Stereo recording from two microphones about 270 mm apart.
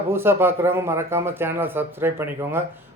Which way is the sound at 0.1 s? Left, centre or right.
Centre.